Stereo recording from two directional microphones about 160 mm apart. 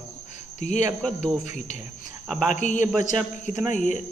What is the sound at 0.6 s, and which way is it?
Speech, 45° left (ahead or behind).